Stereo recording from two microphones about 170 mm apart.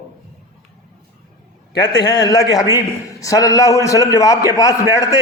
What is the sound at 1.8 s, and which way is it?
A man's voice, 25° left (ahead or behind).